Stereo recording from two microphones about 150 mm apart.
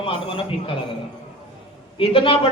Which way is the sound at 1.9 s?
35° left (ahead or behind).